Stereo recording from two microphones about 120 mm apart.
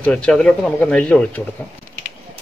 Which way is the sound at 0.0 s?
10° left (ahead or behind).